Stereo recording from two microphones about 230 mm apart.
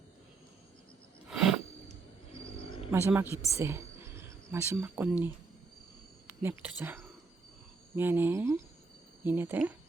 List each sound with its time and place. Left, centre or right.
1.3 s a sound: centre
2.3 s roaring cats: left
2.9 s speech: centre
3.6 s whispering: centre
4.5 s speech: centre